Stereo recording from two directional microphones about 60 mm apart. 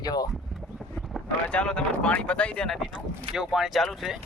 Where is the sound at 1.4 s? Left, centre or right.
Centre.